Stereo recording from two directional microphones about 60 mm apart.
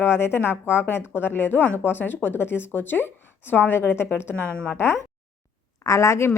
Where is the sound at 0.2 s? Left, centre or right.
Left.